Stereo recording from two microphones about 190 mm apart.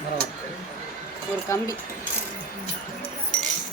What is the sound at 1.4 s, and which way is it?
Speech, 15° left (ahead or behind).